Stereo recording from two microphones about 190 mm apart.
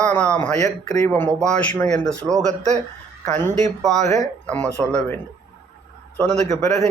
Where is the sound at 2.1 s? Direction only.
15° right (ahead or behind).